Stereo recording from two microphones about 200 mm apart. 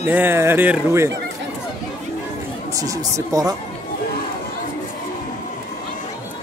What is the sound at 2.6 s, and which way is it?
Speech, 15° right (ahead or behind).